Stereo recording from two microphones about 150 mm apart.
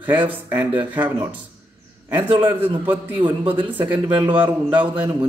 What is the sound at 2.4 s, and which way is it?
Speech, 15° right (ahead or behind).